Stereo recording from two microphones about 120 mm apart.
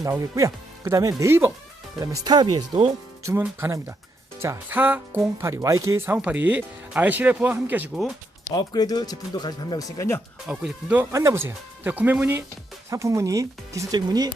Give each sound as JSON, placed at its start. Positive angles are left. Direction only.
{"t": 0.0, "sound": "speech", "side_deg": -25}
{"t": 2.0, "sound": "speech", "side_deg": -35}
{"t": 3.6, "sound": "speech", "side_deg": -25}
{"t": 5.4, "sound": "speech", "side_deg": -25}
{"t": 6.1, "sound": "speech", "side_deg": -15}
{"t": 8.5, "sound": "speech", "side_deg": 35}
{"t": 10.5, "sound": "speech", "side_deg": -10}
{"t": 11.1, "sound": "speech", "side_deg": -25}